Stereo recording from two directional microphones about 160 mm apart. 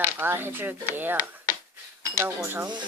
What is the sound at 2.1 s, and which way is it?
Speech, 15° right (ahead or behind).